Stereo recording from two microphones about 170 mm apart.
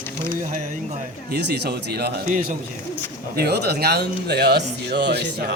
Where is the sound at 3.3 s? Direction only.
70° right (ahead or behind).